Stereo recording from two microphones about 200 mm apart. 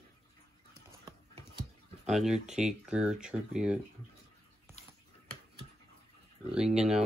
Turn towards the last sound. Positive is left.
turn(degrees=-5)  # may be behind; listen again after turning